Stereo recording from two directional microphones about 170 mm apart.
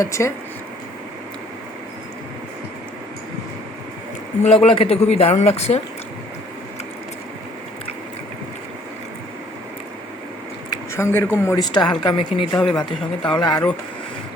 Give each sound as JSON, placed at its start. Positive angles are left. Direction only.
{"t": 0.0, "sound": "speech", "side_deg": 20}
{"t": 4.4, "sound": "speech", "side_deg": 35}
{"t": 10.7, "sound": "speech", "side_deg": 15}
{"t": 11.6, "sound": "speech", "side_deg": 25}
{"t": 12.5, "sound": "speech", "side_deg": 5}
{"t": 12.8, "sound": "speech", "side_deg": 25}